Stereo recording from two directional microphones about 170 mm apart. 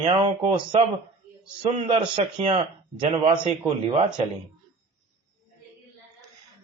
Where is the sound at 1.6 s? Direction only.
25° right (ahead or behind).